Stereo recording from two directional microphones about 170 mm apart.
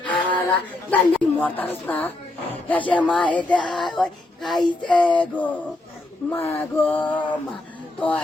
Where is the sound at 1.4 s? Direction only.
10° left (ahead or behind).